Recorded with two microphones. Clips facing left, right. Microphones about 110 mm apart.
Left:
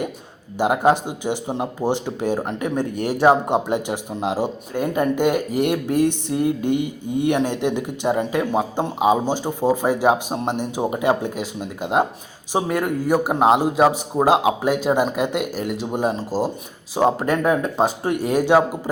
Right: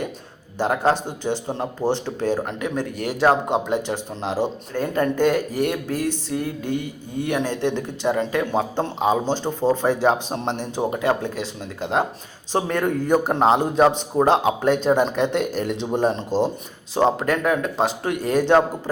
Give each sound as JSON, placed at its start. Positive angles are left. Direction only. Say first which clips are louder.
{"t": 0.6, "sound": "speech", "louder": "left 3 dB", "side_deg": 15}